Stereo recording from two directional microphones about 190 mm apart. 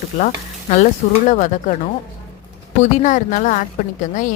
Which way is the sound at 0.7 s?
40° left (ahead or behind).